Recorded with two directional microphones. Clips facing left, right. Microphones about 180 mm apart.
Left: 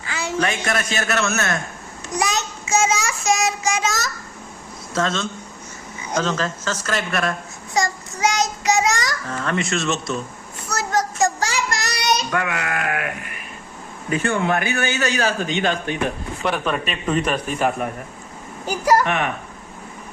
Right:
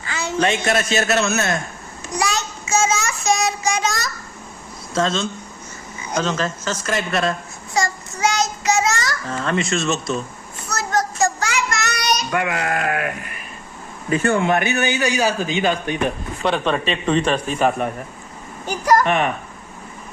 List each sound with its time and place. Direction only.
0.1 s a sound: 10° left (ahead or behind)
0.3 s a man's voice: 25° right (ahead or behind)
2.1 s child singing: 20° left (ahead or behind)
3.2 s child singing: centre (ahead or behind)
4.9 s a man's voice: 25° right (ahead or behind)
7.7 s child singing: 15° left (ahead or behind)
9.3 s a man's voice: 25° right (ahead or behind)
10.7 s a sound: 10° left (ahead or behind)
11.3 s child singing: 35° left (ahead or behind)
12.5 s sheep: 35° right (ahead or behind)
14.1 s sheep: 40° right (ahead or behind)
14.4 s a man's voice: 20° right (ahead or behind)
18.6 s speech: 10° left (ahead or behind)
19.0 s sheep: 30° right (ahead or behind)